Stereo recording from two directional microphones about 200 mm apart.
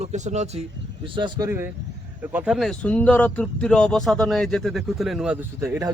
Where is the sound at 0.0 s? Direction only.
35° right (ahead or behind).